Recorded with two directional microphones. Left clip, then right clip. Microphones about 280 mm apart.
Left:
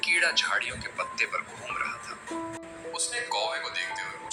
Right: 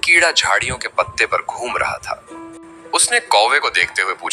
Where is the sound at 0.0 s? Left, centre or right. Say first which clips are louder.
Right 11 dB; right.